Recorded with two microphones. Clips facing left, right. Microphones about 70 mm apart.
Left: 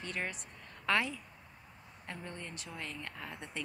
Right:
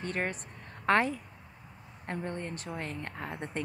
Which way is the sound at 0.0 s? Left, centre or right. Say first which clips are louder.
Right 6 dB; right.